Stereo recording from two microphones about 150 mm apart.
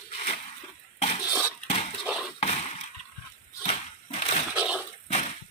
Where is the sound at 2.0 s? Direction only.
5° right (ahead or behind).